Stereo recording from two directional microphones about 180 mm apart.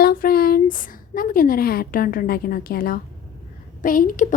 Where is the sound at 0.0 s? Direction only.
55° left (ahead or behind).